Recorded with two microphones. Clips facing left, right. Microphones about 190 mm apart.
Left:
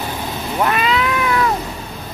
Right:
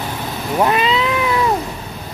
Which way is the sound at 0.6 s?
25° right (ahead or behind).